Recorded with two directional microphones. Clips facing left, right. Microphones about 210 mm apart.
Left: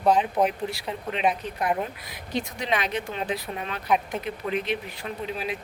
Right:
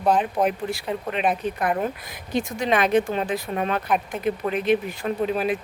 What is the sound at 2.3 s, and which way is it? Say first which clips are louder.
Speech: right 5 dB; 50° right (ahead or behind).